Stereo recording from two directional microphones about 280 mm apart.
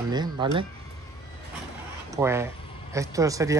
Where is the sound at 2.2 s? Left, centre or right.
Centre.